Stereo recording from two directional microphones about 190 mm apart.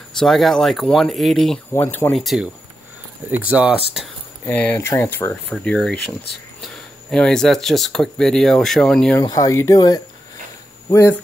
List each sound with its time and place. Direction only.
0.2 s speech: centre (ahead or behind)
2.1 s speech: centre (ahead or behind)
4.5 s speech: 10° left (ahead or behind)
9.2 s speech: 20° left (ahead or behind)